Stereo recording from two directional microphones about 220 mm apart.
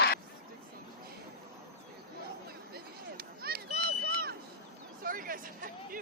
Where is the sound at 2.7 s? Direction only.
45° right (ahead or behind).